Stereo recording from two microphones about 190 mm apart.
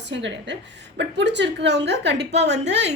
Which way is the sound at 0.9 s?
65° right (ahead or behind).